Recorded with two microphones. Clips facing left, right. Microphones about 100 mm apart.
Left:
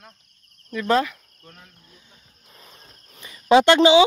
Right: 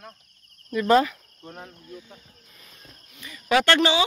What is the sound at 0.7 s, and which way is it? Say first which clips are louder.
Speech: right 2 dB; 5° right (ahead or behind).